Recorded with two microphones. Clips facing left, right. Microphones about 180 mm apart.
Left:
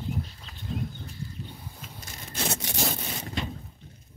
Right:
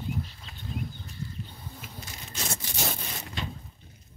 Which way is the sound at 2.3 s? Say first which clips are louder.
Left 5 dB; 70° left (ahead or behind).